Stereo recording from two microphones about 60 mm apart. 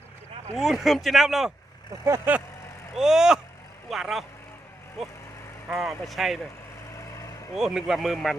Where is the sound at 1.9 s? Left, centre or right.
Right.